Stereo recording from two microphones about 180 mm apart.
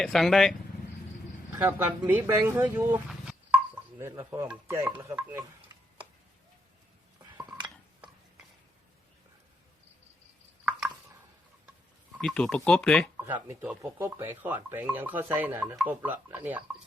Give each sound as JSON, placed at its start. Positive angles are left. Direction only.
{"t": 0.0, "sound": "speech", "side_deg": 0}
{"t": 1.5, "sound": "speech", "side_deg": -10}
{"t": 3.9, "sound": "speech", "side_deg": -15}
{"t": 7.3, "sound": "dishes", "side_deg": -25}
{"t": 10.7, "sound": "chopping", "side_deg": -5}
{"t": 12.1, "sound": "speech", "side_deg": 5}
{"t": 13.1, "sound": "speech", "side_deg": -10}